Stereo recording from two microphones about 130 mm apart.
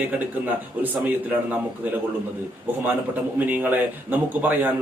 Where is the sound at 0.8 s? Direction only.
15° right (ahead or behind).